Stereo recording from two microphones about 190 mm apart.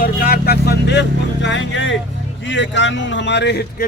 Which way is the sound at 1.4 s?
75° left (ahead or behind).